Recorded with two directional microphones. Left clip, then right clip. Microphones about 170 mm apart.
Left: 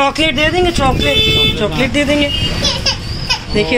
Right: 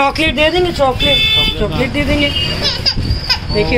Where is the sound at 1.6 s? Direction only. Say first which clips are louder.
Left 2 dB; 10° left (ahead or behind).